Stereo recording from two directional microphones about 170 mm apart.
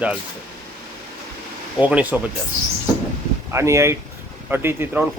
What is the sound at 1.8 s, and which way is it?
Speech, 10° right (ahead or behind).